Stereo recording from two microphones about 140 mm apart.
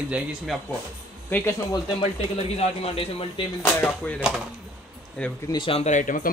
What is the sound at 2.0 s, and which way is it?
A man's voice, 45° left (ahead or behind).